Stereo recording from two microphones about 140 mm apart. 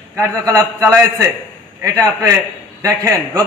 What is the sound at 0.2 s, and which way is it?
A man's voice, 20° right (ahead or behind).